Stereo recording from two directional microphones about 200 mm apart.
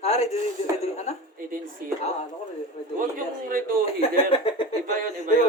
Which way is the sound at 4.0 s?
30° left (ahead or behind).